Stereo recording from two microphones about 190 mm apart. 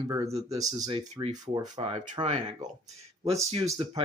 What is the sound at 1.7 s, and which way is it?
Speech, 30° right (ahead or behind).